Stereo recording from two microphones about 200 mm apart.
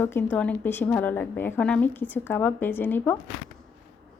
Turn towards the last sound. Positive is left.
turn(degrees=10)  # may be behind; listen again after turning